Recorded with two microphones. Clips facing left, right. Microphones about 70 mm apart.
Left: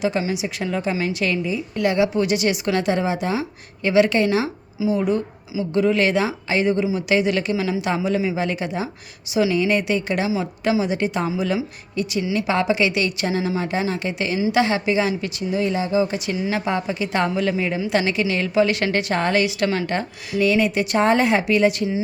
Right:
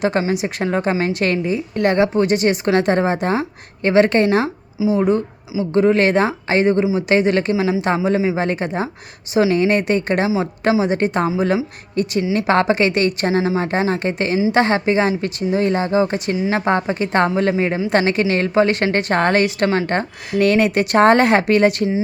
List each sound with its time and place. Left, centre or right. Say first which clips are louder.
0.2 s a woman's voice: right 4 dB; right
10.2 s a woman's voice: right 4 dB; right